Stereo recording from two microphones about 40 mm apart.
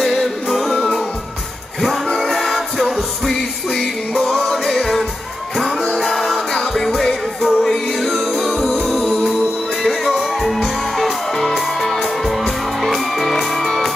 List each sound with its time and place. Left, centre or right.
0.0 s music: centre
2.1 s music: centre
9.8 s music: centre